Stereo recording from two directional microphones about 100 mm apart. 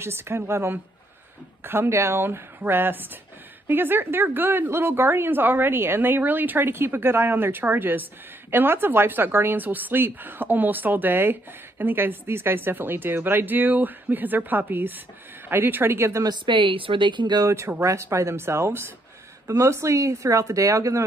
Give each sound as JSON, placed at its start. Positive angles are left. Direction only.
{"t": 0.0, "sound": "a woman's voice", "side_deg": -25}
{"t": 16.3, "sound": "speech", "side_deg": -55}
{"t": 17.5, "sound": "a woman's voice", "side_deg": -25}